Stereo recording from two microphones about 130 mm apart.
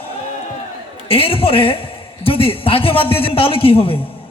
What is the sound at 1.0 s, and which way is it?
A man's voice, 45° left (ahead or behind).